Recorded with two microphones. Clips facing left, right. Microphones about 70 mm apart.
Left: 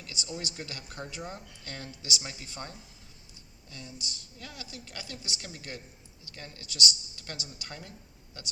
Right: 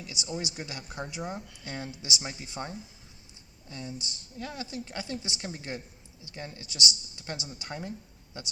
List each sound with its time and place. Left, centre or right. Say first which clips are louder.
0.0 s a woman's voice: right 3 dB; centre